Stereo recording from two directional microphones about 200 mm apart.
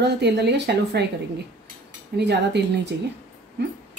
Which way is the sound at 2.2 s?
55° right (ahead or behind).